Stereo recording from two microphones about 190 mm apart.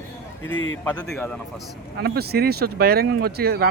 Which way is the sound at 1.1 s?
5° left (ahead or behind).